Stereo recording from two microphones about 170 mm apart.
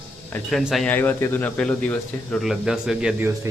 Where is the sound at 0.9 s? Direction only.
10° left (ahead or behind).